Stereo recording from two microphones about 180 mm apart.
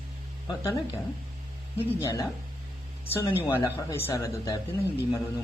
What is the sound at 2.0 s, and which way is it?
Speech, 15° left (ahead or behind).